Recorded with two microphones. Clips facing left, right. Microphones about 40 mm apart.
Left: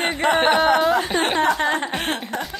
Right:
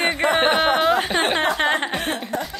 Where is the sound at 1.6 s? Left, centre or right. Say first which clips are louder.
Right 1 dB; right.